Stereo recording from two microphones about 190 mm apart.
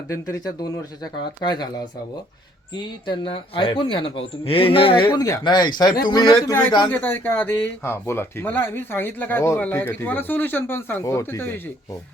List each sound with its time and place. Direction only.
0.1 s speech: 15° left (ahead or behind)
2.7 s speech: 25° left (ahead or behind)